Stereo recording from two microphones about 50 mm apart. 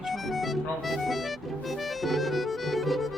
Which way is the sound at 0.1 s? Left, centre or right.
Centre.